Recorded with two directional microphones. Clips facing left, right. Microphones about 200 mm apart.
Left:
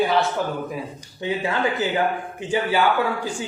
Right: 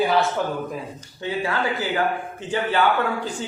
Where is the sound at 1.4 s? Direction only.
20° left (ahead or behind).